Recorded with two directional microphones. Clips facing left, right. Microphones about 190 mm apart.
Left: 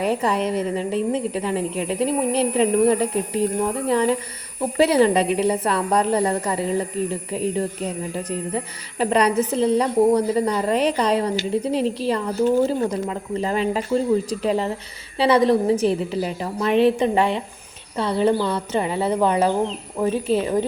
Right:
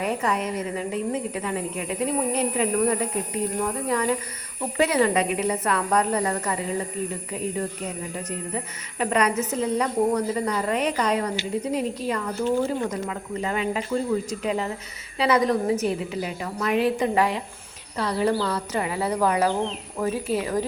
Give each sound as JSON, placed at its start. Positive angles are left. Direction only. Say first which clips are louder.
{"t": 0.0, "sound": "a woman's voice", "louder": "left 4 dB", "side_deg": 30}
{"t": 8.1, "sound": "a woman's voice", "louder": "left 5 dB", "side_deg": 30}